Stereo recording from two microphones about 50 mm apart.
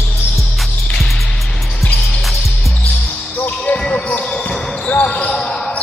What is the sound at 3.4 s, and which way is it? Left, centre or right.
Basketball bounce, left.